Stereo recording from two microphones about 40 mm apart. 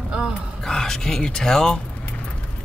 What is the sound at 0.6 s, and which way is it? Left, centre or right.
Speech, centre.